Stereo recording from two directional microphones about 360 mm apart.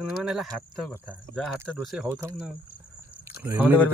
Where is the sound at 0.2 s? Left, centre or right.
Centre.